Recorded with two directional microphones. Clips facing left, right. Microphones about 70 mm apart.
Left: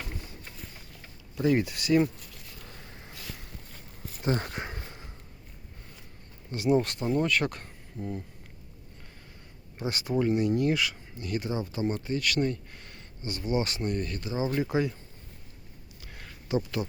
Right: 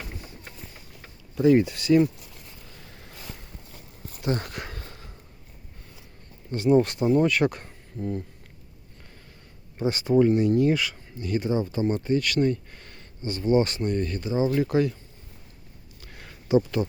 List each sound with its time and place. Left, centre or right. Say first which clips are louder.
1.4 s speech: right 6 dB; centre
4.2 s a sound: right 1 dB; left
6.5 s speech: right 5 dB; centre
9.7 s speech: right 8 dB; centre
14.6 s speech: right 5 dB; centre
16.0 s a sound: right 1 dB; centre